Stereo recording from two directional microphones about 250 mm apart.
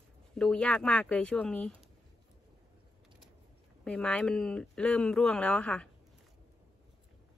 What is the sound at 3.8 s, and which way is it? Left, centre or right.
Speech, centre.